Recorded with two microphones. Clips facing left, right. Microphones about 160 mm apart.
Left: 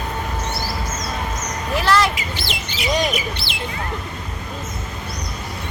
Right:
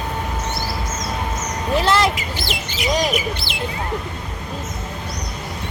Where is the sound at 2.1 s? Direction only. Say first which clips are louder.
Right 1 dB; 50° right (ahead or behind).